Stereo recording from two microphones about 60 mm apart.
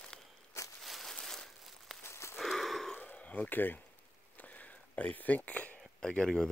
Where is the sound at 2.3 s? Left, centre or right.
Centre.